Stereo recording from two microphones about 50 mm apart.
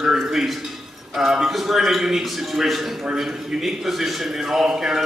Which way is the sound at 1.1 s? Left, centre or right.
Centre.